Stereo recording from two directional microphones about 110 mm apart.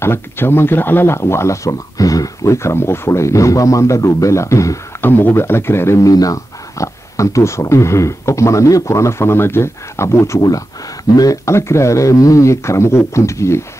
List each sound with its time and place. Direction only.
0.0 s speech: 20° left (ahead or behind)